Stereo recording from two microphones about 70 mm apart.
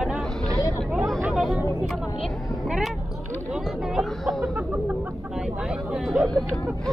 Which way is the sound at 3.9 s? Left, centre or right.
Centre.